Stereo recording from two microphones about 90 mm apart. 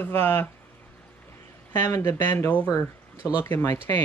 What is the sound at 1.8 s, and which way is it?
Speech, 30° left (ahead or behind).